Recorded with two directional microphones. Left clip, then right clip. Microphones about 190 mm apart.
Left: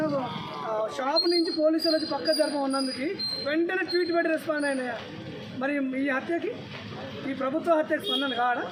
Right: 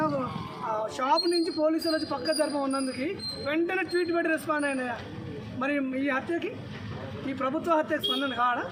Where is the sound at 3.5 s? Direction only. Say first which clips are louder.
Even; 20° right (ahead or behind).